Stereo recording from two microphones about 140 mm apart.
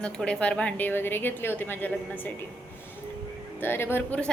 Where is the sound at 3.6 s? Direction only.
15° left (ahead or behind).